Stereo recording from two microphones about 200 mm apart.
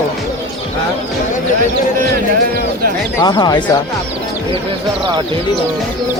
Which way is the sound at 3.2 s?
20° left (ahead or behind).